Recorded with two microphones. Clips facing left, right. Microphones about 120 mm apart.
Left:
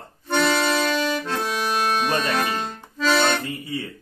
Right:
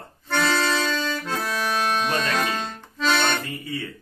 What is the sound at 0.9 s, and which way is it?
Accordion, 15° left (ahead or behind).